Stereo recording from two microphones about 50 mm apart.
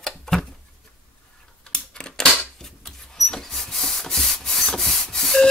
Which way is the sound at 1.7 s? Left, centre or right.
Centre.